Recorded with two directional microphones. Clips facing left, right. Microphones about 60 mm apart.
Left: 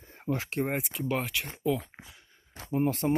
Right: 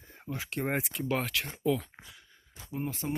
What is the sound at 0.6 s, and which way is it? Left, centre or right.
Speech, centre.